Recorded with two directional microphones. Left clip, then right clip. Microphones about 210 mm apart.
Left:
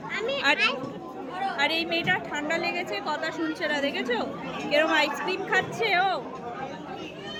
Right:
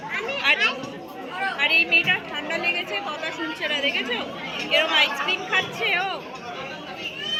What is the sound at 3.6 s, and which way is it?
A woman's voice, 50° left (ahead or behind).